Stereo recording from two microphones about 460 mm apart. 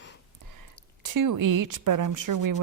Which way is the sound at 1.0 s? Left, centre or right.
Right.